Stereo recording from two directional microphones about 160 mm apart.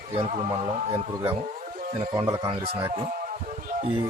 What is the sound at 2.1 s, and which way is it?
Speech, 20° right (ahead or behind).